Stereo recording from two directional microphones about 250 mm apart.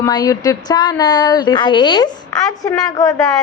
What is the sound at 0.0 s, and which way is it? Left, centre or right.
A woman's voice, centre.